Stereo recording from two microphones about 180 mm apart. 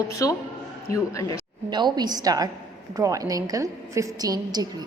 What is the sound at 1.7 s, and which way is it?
A woman's voice, 25° right (ahead or behind).